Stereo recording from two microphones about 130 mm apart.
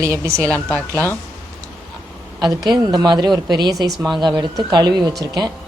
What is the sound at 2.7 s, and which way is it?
A woman's voice, 30° right (ahead or behind).